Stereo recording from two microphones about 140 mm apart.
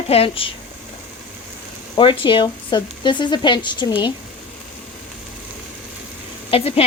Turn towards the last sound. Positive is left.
turn(degrees=45)  # may be behind; listen again after turning